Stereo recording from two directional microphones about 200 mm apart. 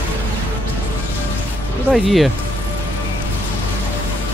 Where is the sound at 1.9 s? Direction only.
Centre (ahead or behind).